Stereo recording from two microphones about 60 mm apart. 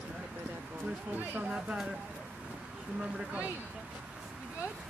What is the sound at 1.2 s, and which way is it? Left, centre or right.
Speech, right.